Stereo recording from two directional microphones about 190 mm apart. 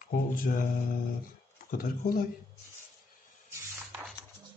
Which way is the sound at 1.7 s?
45° left (ahead or behind).